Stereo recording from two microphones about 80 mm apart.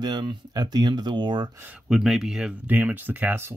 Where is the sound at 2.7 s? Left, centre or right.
Right.